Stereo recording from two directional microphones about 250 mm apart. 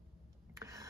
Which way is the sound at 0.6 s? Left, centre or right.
Centre.